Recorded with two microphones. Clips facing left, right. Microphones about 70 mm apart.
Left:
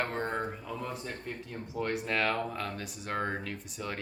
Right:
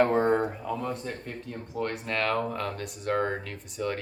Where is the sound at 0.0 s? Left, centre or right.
Centre.